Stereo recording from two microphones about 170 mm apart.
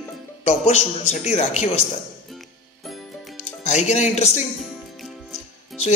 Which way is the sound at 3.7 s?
40° left (ahead or behind).